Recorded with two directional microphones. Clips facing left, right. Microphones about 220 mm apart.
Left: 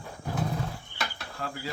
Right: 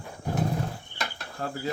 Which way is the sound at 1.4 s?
40° right (ahead or behind).